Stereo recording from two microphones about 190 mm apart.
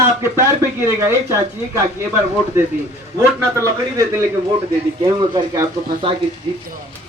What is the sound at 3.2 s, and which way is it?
A man's voice, 15° right (ahead or behind).